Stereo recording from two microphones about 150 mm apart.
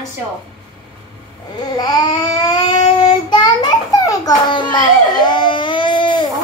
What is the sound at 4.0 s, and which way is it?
Baby cry, 25° left (ahead or behind).